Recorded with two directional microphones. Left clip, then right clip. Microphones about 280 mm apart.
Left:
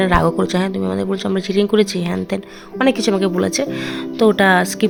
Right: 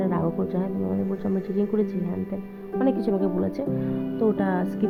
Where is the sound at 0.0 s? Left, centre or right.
Left.